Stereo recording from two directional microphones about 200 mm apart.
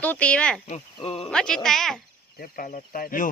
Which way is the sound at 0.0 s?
5° left (ahead or behind).